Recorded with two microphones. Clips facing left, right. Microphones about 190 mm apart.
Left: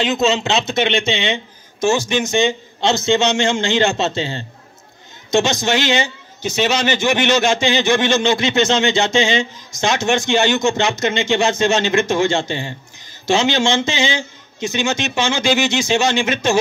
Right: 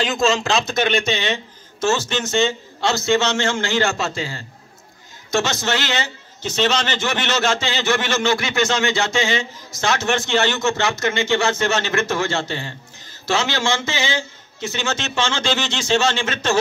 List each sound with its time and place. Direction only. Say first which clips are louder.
0.0 s speech: left 2 dB; 20° left (ahead or behind)
1.8 s a man's voice: left 4 dB; 15° left (ahead or behind)